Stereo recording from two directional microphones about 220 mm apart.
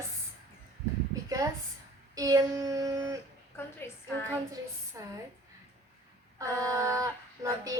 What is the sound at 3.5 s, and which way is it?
Speech, 10° left (ahead or behind).